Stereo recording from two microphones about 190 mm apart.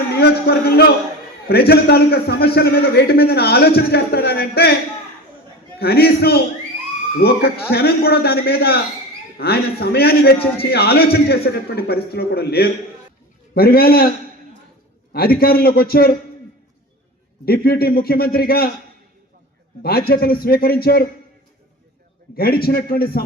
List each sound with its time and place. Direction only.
0.2 s a man's voice: 55° left (ahead or behind)
5.8 s a man's voice: 55° left (ahead or behind)
15.1 s a man's voice: 55° left (ahead or behind)
17.4 s a man's voice: 55° left (ahead or behind)
19.8 s a man's voice: 55° left (ahead or behind)
22.4 s a man's voice: 55° left (ahead or behind)